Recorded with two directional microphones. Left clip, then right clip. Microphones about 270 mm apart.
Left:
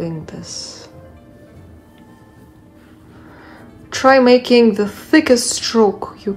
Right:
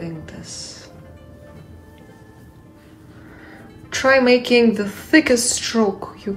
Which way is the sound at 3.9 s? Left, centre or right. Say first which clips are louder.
Left 4 dB; centre.